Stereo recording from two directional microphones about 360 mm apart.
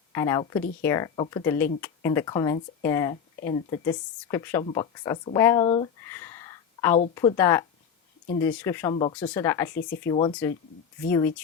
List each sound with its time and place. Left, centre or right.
0.1 s speech: centre
9.7 s speech: left
10.0 s speech: centre